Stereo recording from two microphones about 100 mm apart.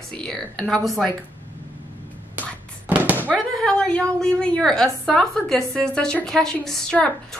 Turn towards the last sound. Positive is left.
turn(degrees=10)  # may be behind; listen again after turning